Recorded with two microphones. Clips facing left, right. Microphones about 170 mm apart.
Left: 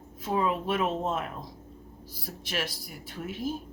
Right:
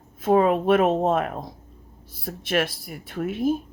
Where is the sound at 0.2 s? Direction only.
60° right (ahead or behind).